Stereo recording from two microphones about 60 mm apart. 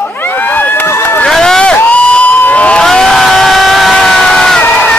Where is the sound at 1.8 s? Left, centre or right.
Left.